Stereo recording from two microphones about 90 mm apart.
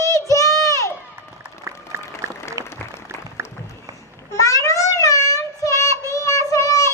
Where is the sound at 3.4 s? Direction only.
30° right (ahead or behind).